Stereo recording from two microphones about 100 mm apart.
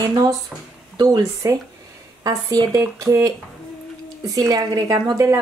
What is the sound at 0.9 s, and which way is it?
Speech, 40° right (ahead or behind).